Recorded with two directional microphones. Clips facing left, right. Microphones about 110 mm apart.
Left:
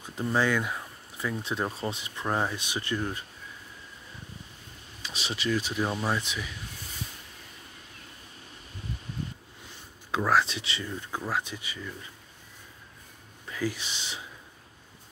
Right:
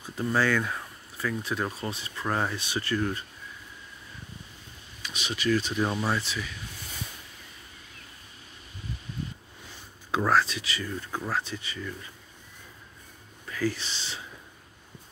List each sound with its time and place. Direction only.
0.2 s speech: 15° left (ahead or behind)
5.0 s speech: 30° left (ahead or behind)
5.5 s speech: 10° left (ahead or behind)
5.8 s speech: centre (ahead or behind)
6.0 s speech: 15° left (ahead or behind)
10.4 s speech: 25° left (ahead or behind)
13.5 s speech: 15° left (ahead or behind)